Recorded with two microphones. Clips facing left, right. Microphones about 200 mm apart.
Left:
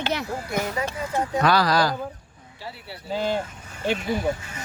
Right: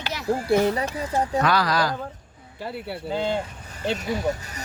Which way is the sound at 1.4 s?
35° left (ahead or behind).